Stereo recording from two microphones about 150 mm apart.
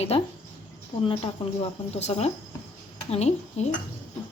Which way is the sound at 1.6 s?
45° left (ahead or behind).